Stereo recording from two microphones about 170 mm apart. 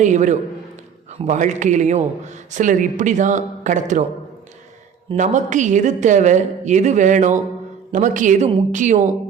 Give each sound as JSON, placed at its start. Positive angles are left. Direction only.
{"t": 0.0, "sound": "a woman's voice", "side_deg": -45}
{"t": 5.1, "sound": "a woman's voice", "side_deg": -45}